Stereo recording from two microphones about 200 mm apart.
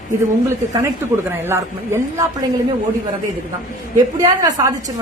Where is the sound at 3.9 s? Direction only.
20° right (ahead or behind).